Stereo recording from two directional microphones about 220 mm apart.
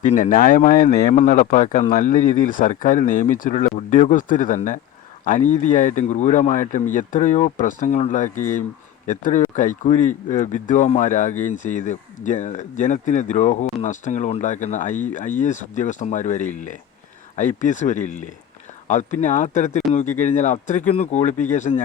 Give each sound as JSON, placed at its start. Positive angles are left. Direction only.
{"t": 0.1, "sound": "speech", "side_deg": 35}